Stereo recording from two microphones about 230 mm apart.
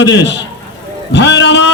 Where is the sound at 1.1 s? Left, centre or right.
Left.